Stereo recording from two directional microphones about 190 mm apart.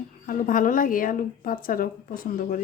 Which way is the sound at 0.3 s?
45° left (ahead or behind).